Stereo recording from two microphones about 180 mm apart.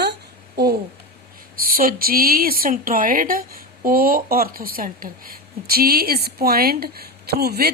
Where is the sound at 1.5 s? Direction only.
55° right (ahead or behind).